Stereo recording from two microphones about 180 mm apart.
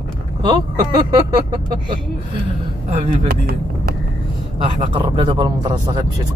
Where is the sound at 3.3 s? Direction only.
60° right (ahead or behind).